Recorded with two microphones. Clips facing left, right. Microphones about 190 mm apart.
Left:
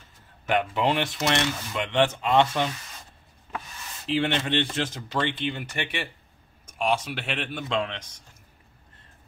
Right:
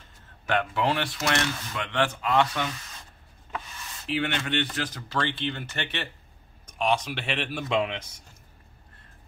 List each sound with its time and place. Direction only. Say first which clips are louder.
0.5 s speech: left 2 dB; 15° left (ahead or behind)
4.1 s speech: left 3 dB; 25° left (ahead or behind); by 8.0 s 10° right (ahead or behind)